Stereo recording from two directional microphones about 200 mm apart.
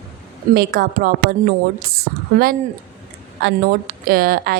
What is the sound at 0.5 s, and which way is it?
A woman's voice, 50° right (ahead or behind).